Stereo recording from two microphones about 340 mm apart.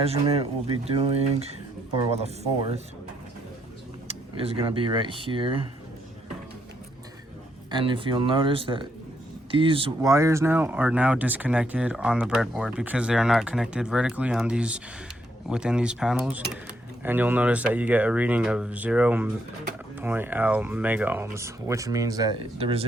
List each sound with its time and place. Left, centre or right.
0.0 s speech: centre
4.1 s speech: centre
7.7 s speech: centre